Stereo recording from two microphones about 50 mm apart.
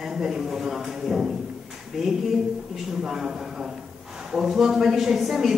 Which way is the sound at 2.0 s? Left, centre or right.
Centre.